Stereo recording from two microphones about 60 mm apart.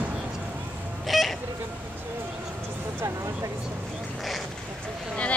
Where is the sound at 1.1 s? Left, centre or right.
Centre.